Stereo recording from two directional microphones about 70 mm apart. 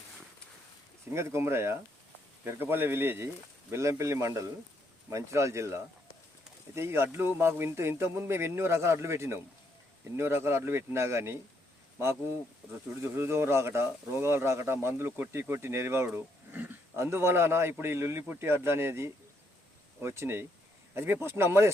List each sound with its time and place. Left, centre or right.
1.1 s a man's voice: right
13.0 s speech: right
17.0 s speech: right